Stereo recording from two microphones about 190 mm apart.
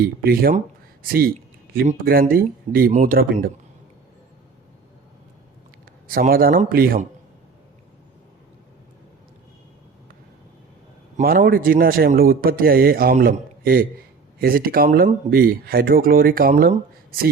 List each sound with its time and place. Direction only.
0.0 s speech: 50° right (ahead or behind)
6.1 s speech: 50° right (ahead or behind)
11.2 s speech: 50° right (ahead or behind)